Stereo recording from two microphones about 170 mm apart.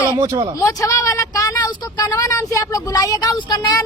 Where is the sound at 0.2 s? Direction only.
20° right (ahead or behind).